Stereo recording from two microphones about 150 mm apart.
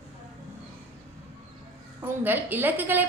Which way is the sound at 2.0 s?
15° right (ahead or behind).